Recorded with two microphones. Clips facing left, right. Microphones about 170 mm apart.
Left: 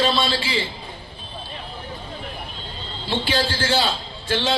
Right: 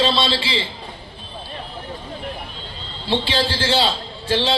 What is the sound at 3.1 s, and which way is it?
A man's voice, 30° right (ahead or behind).